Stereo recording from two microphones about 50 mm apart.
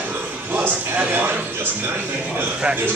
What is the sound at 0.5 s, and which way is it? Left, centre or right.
Speech, right.